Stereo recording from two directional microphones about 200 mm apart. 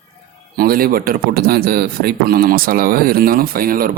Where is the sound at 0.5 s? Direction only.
45° right (ahead or behind).